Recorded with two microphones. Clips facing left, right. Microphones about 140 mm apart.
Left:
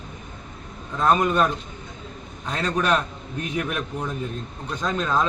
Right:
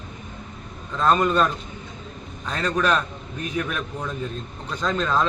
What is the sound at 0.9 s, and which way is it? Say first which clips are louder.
Speech: even; 10° left (ahead or behind).